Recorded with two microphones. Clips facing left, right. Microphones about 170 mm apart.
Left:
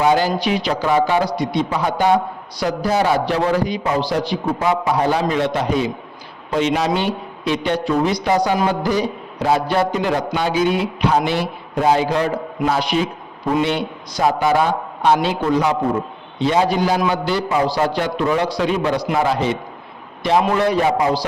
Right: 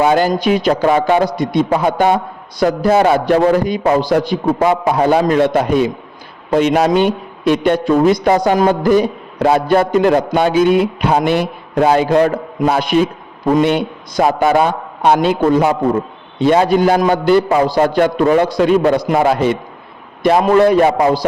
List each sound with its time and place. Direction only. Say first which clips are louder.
0.0 s a man's voice: right 4 dB; 50° right (ahead or behind)